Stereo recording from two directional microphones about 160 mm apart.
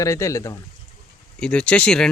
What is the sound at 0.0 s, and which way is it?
Speech, 20° left (ahead or behind).